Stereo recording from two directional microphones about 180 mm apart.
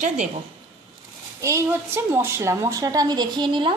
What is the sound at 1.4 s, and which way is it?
A woman's voice, 15° right (ahead or behind).